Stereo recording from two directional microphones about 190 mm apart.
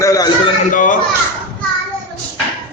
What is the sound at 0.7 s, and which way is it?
Speech, 45° left (ahead or behind).